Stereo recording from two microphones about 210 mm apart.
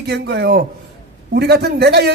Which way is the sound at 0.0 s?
50° right (ahead or behind).